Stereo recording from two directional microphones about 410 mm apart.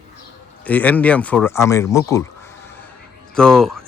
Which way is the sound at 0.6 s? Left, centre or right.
Centre.